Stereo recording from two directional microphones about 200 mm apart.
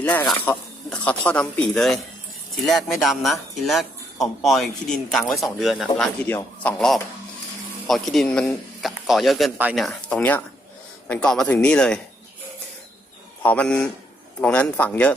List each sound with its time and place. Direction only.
0.0 s a man's voice: 10° left (ahead or behind)
13.4 s a man's voice: 5° left (ahead or behind)